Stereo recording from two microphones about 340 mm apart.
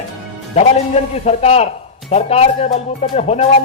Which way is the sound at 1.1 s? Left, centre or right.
Centre.